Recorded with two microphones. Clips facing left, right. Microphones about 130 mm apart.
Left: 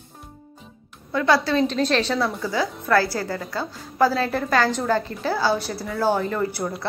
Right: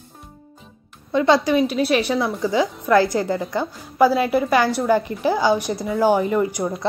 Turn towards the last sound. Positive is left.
turn(degrees=-15)  # may be behind; listen again after turning